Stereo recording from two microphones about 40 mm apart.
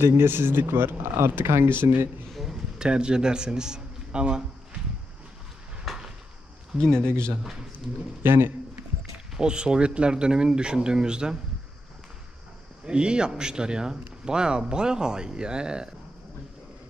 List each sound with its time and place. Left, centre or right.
0.0 s speech: right
2.5 s a man's voice: centre
5.9 s a sound: centre
6.8 s speech: centre
8.2 s speech: right
9.4 s speech: right
12.8 s speech: right